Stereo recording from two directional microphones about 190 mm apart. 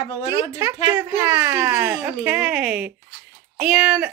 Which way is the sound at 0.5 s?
15° right (ahead or behind).